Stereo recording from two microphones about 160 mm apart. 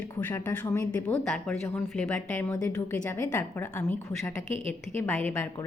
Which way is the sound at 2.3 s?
15° left (ahead or behind).